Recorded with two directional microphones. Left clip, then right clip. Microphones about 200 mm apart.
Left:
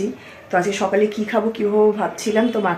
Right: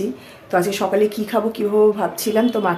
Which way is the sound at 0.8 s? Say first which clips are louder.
Even; 10° right (ahead or behind).